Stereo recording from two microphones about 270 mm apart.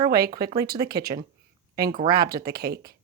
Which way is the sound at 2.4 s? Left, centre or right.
Right.